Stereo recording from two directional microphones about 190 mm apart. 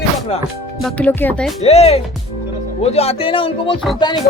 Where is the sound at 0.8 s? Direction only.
5° left (ahead or behind).